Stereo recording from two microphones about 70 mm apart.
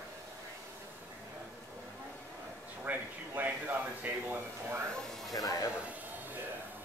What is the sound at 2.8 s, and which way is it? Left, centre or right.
Speech, right.